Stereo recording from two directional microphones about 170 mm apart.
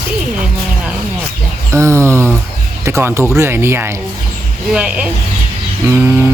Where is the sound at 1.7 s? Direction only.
15° right (ahead or behind).